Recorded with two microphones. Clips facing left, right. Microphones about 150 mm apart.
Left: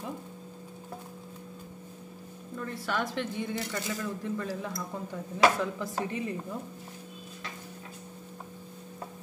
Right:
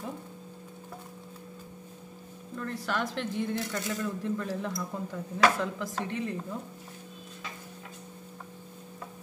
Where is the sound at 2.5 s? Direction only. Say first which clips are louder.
Even; 5° left (ahead or behind).